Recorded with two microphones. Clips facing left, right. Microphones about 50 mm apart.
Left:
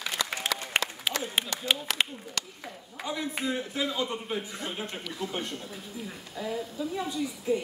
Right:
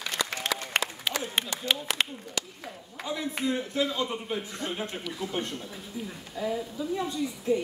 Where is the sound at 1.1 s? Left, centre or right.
Centre.